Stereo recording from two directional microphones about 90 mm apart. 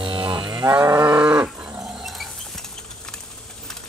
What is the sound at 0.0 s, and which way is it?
Moo, 65° right (ahead or behind).